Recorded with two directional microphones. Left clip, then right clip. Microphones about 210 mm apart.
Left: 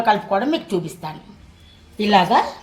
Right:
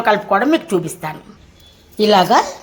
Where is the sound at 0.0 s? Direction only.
30° right (ahead or behind).